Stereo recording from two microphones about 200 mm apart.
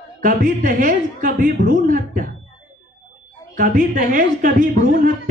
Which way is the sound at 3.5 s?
40° right (ahead or behind).